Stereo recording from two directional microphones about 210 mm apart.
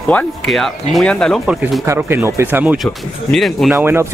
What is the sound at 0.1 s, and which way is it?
Speech, 5° left (ahead or behind).